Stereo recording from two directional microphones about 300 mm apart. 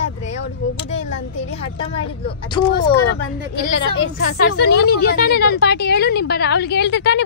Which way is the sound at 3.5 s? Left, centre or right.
Left.